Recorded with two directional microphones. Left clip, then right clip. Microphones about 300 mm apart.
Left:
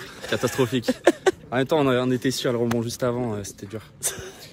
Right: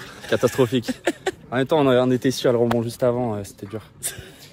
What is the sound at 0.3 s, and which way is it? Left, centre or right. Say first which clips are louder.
Speech: right 4 dB; centre.